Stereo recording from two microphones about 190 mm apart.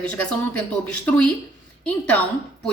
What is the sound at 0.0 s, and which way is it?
A woman's voice, 5° left (ahead or behind).